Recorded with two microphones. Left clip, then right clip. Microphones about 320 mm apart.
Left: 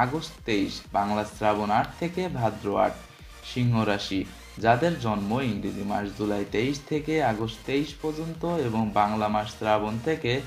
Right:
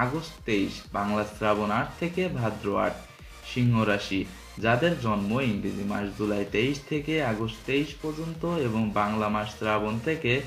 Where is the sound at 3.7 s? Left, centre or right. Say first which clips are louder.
Even; centre.